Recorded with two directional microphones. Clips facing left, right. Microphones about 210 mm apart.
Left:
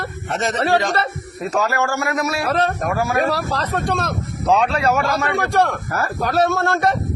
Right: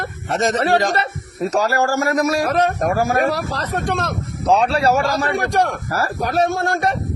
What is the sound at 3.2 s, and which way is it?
Speech, 15° right (ahead or behind).